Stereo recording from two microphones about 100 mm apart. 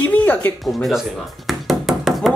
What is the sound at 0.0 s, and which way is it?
Music, 20° left (ahead or behind).